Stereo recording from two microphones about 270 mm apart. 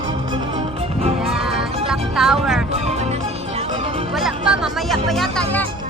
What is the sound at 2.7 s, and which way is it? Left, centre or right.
Music, right.